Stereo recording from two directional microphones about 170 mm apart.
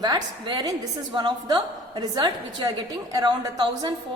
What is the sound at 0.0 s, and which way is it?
A woman's voice, 25° right (ahead or behind).